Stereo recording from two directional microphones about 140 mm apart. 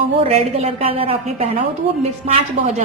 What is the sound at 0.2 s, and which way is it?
A woman's voice, 45° right (ahead or behind).